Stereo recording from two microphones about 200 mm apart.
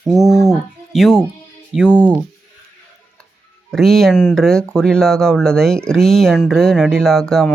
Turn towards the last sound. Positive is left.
turn(degrees=5)  # may be behind; listen again after turning